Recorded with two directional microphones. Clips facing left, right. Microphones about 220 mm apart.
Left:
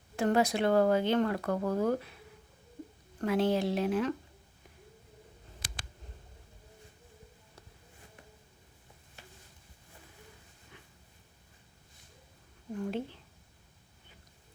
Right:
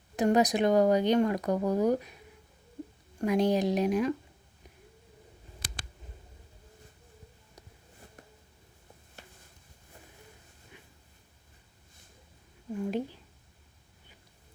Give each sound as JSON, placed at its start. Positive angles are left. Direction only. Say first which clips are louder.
{"t": 0.2, "sound": "speech", "louder": "right 3 dB", "side_deg": -15}
{"t": 3.2, "sound": "speech", "louder": "right 2 dB", "side_deg": -15}
{"t": 12.7, "sound": "speech", "louder": "right 3 dB", "side_deg": -10}